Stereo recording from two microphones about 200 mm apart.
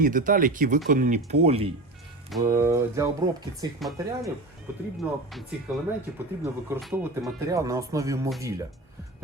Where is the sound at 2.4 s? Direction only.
15° right (ahead or behind).